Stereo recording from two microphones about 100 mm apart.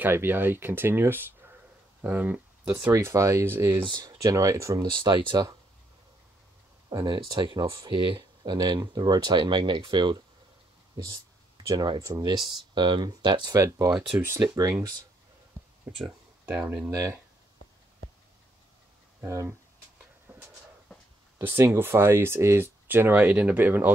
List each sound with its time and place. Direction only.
0.0 s speech: 20° right (ahead or behind)
2.9 s speech: 30° right (ahead or behind)
3.9 s speech: 40° right (ahead or behind)
4.8 s speech: 50° right (ahead or behind)
7.1 s speech: 45° right (ahead or behind)
11.7 s speech: 45° right (ahead or behind)
13.6 s speech: 30° right (ahead or behind)
15.9 s speech: 15° right (ahead or behind)
16.9 s speech: 35° right (ahead or behind)
19.2 s speech: 30° right (ahead or behind)
20.3 s a sound: 20° right (ahead or behind)
21.4 s speech: 20° right (ahead or behind)